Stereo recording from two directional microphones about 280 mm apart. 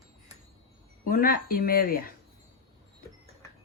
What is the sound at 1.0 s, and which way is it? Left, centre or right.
Speech, left.